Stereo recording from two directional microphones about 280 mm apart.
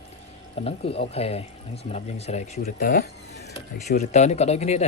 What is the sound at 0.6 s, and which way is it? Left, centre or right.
Speech, left.